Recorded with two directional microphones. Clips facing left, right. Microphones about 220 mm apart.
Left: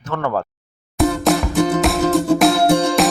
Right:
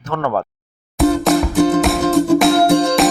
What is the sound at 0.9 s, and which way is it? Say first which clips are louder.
Music: right 3 dB; centre (ahead or behind).